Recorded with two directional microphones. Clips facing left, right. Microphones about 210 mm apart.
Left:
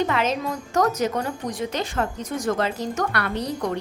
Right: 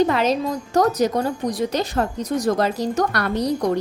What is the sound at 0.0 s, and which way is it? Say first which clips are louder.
A woman's voice: right 5 dB; 35° right (ahead or behind).